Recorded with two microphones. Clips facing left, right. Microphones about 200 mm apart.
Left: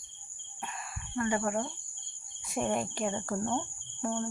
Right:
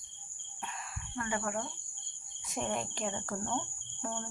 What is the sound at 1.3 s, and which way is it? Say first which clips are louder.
Speech: left 4 dB; 30° left (ahead or behind).